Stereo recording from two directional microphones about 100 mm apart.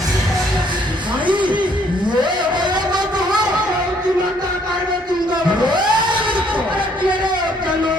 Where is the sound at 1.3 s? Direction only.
50° right (ahead or behind).